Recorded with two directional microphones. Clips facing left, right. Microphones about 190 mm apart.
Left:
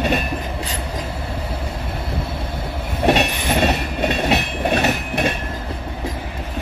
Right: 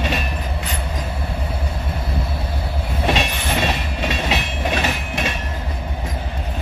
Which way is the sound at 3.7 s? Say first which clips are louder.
Left 3 dB; 60° left (ahead or behind).